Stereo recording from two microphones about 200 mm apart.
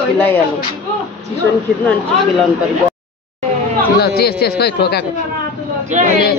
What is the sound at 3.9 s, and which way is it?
Speech, 50° left (ahead or behind).